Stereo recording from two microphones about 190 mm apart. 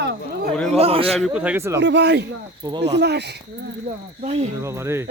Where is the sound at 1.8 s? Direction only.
65° right (ahead or behind).